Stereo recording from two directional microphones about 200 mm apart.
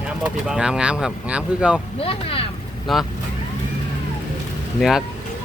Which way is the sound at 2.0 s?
30° left (ahead or behind).